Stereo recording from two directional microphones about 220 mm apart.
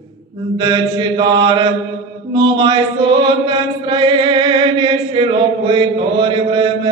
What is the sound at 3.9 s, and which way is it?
Chant, 20° right (ahead or behind).